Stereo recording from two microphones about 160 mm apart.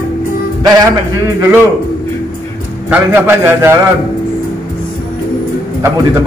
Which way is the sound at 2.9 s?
15° right (ahead or behind).